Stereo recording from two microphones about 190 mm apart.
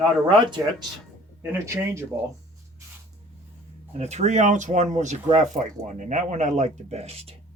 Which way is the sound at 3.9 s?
35° right (ahead or behind).